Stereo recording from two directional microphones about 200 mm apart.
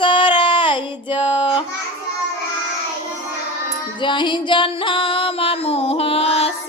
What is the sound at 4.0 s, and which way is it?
Music, 25° left (ahead or behind).